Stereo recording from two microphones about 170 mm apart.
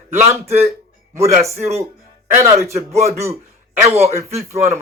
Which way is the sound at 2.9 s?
40° right (ahead or behind).